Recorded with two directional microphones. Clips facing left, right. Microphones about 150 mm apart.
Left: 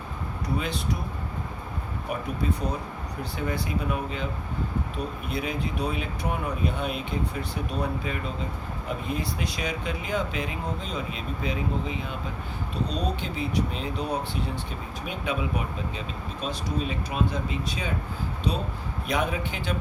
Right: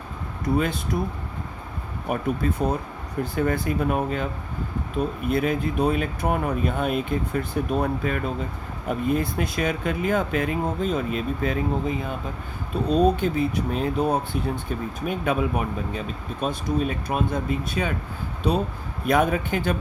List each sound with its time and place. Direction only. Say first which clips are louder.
0.4 s speech: right 6 dB; 50° right (ahead or behind)
2.0 s speech: right 5 dB; 50° right (ahead or behind)
5.3 s speech: right 7 dB; 50° right (ahead or behind)
19.0 s speech: right 7 dB; 50° right (ahead or behind)